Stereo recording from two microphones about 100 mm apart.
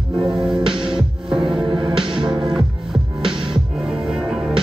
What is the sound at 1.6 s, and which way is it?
Music, 55° right (ahead or behind).